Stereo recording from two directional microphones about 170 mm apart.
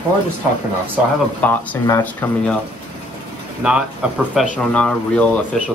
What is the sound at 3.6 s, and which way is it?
Speech, 5° right (ahead or behind).